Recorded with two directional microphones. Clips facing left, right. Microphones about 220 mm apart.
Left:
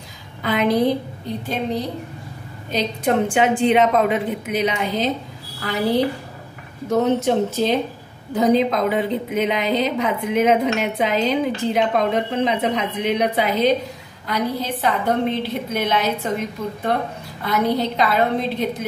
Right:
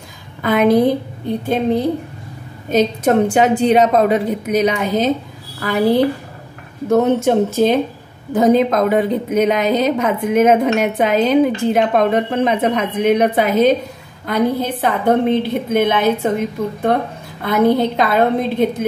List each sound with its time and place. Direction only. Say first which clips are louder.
0.4 s a woman's voice: right 5 dB; 50° right (ahead or behind)
17.5 s a woman's voice: right 6 dB; 55° right (ahead or behind)